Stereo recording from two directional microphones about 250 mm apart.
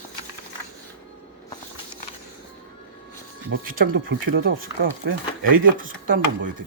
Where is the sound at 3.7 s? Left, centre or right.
Right.